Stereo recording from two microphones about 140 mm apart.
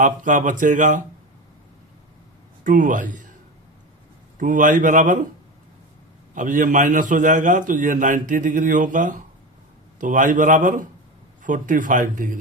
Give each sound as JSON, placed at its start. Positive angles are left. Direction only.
{"t": 0.0, "sound": "speech", "side_deg": -65}
{"t": 2.6, "sound": "a man's voice", "side_deg": -70}
{"t": 4.4, "sound": "a man's voice", "side_deg": -70}
{"t": 6.3, "sound": "a man's voice", "side_deg": -65}